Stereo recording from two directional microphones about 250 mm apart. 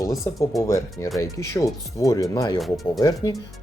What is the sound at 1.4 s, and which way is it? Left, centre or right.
Speech, centre.